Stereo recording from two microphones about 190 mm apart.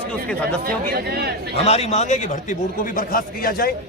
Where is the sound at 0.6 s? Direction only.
55° right (ahead or behind).